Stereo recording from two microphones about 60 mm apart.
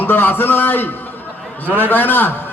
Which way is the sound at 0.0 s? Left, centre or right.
Left.